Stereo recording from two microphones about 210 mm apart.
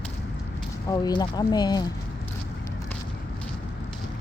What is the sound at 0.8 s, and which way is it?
Speech, 20° left (ahead or behind).